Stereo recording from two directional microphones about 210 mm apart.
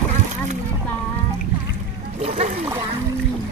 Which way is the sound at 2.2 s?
30° right (ahead or behind).